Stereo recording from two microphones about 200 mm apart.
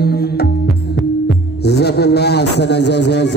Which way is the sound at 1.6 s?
55° left (ahead or behind).